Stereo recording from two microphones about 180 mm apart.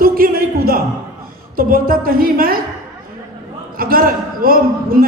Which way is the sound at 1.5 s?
50° right (ahead or behind).